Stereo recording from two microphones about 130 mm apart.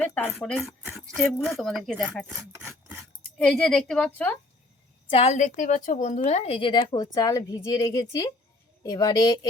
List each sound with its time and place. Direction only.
0.0 s a woman's voice: 10° left (ahead or behind)
0.6 s speech: 10° right (ahead or behind)
1.0 s a woman's voice: 5° left (ahead or behind)
3.3 s a woman's voice: 5° left (ahead or behind)
5.1 s a woman's voice: 55° left (ahead or behind); by 9.5 s 30° left (ahead or behind)